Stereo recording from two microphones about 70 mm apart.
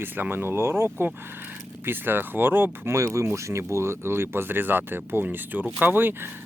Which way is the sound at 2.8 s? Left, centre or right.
Right.